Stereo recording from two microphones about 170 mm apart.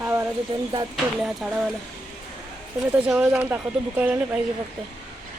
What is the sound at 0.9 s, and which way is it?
Speech, centre (ahead or behind).